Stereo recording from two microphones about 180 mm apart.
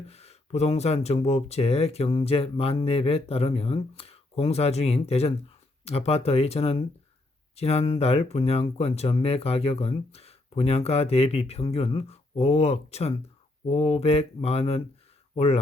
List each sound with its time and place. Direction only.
0.1 s speech: 35° left (ahead or behind)